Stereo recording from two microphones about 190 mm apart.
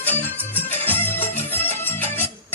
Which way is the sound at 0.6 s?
10° left (ahead or behind).